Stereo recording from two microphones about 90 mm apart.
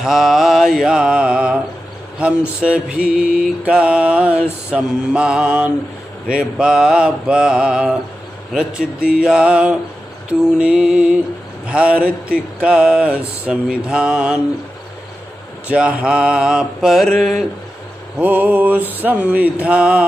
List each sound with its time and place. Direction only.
0.0 s mantra: 5° right (ahead or behind)
15.7 s mantra: 15° right (ahead or behind)
18.2 s mantra: 15° right (ahead or behind)